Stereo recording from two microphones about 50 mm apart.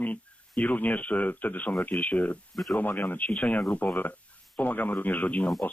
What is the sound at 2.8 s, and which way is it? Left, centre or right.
Speech, left.